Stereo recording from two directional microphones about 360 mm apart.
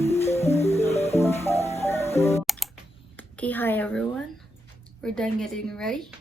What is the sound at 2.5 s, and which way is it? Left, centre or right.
Computer keyboard, centre.